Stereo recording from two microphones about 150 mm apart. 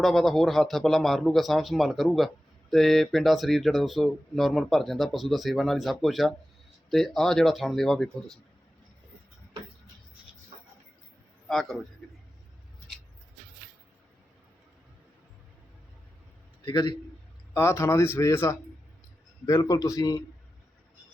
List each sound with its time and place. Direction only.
0.0 s speech: centre (ahead or behind)
11.4 s a man's voice: centre (ahead or behind)
16.6 s a man's voice: 30° left (ahead or behind)
17.5 s a man's voice: 15° left (ahead or behind)